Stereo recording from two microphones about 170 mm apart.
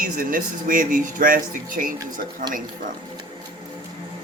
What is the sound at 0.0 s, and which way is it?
Speech, 55° right (ahead or behind).